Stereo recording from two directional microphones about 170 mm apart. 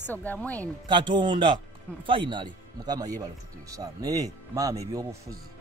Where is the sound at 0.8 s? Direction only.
30° right (ahead or behind).